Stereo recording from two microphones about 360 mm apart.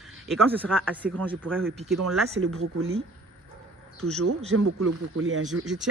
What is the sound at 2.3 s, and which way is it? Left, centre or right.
Speech, right.